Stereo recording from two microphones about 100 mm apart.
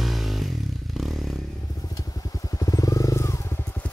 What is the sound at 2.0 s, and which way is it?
Vehicle, 35° left (ahead or behind).